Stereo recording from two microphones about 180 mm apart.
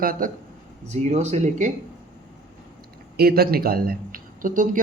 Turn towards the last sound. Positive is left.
turn(degrees=-50)  # may be behind; listen again after turning